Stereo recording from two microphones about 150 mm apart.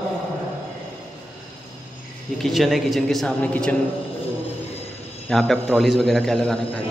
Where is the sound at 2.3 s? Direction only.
Centre (ahead or behind).